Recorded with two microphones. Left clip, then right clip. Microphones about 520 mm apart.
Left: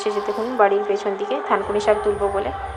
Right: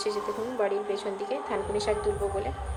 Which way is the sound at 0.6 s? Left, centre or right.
Right.